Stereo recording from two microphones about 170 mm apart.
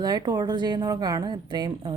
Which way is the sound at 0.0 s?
25° right (ahead or behind).